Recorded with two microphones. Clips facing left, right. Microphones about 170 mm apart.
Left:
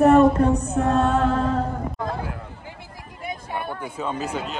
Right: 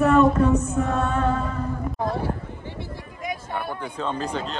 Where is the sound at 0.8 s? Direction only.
70° left (ahead or behind).